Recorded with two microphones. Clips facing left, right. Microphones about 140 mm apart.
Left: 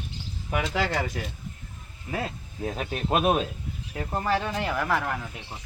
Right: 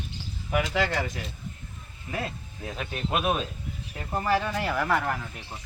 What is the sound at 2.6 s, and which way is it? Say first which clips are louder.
Speech: left 3 dB; 35° left (ahead or behind).